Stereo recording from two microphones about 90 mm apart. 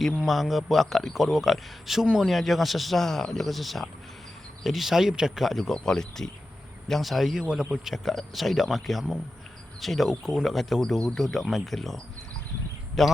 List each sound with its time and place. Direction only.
0.2 s speech: centre (ahead or behind)
13.0 s speech: 5° left (ahead or behind)